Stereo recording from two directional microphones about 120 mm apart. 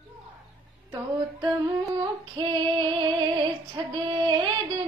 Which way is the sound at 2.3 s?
40° right (ahead or behind).